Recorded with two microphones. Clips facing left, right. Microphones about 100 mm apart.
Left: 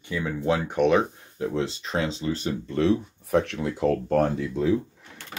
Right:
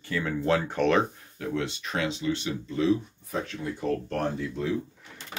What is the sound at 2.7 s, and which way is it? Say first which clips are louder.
Speech: left 2 dB; 65° left (ahead or behind).